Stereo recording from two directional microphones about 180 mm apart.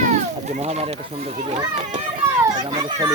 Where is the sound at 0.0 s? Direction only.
40° right (ahead or behind).